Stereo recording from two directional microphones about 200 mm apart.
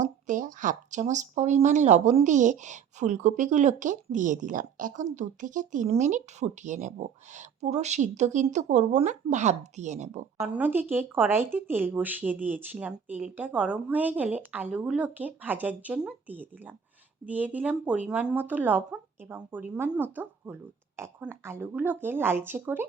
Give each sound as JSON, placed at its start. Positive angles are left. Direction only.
{"t": 0.0, "sound": "speech", "side_deg": -40}
{"t": 10.4, "sound": "speech", "side_deg": -10}